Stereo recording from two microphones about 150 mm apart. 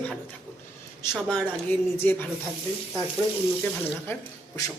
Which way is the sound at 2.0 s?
10° left (ahead or behind).